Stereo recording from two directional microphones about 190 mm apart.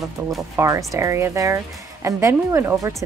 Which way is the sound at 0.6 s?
15° right (ahead or behind).